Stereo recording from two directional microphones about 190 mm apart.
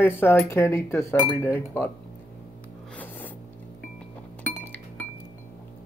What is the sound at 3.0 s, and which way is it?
Music, 10° left (ahead or behind).